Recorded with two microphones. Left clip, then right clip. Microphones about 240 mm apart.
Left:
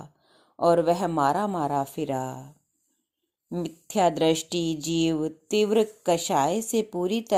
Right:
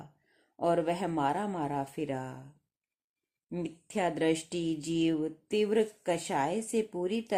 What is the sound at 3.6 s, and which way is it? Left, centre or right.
Speech, left.